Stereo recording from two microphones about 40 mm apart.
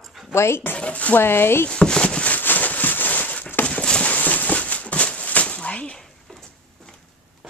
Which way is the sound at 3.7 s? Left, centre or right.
Left.